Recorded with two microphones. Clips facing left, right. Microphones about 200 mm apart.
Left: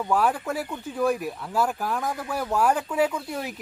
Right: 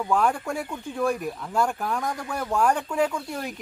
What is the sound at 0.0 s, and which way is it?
Speech, 5° left (ahead or behind).